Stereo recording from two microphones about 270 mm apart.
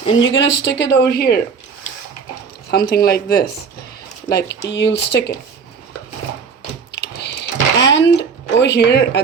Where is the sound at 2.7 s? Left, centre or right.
Left.